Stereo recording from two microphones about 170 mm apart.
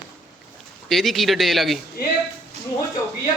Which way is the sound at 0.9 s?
Centre (ahead or behind).